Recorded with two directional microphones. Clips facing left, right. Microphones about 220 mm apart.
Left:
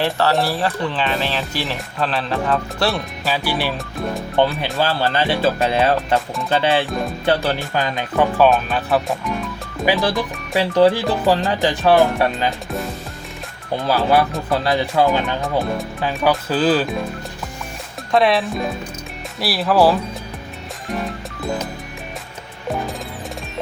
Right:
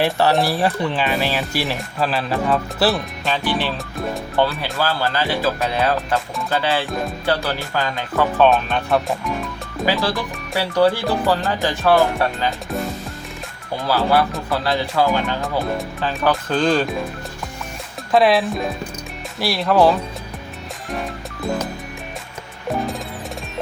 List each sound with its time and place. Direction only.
0.0 s speech: 15° right (ahead or behind); by 8.4 s 15° left (ahead or behind)
8.4 s speech: centre (ahead or behind)
9.8 s speech: 15° left (ahead or behind)
13.8 s speech: 15° left (ahead or behind)
18.1 s speech: centre (ahead or behind)